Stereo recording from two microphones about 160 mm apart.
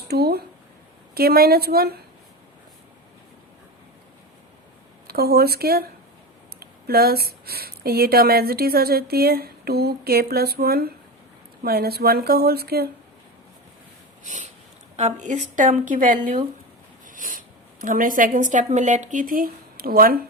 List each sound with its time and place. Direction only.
0.1 s speech: 80° right
5.0 s speech: 75° right (ahead or behind)
14.9 s a woman's voice: 45° right (ahead or behind); by 20.1 s 65° right (ahead or behind)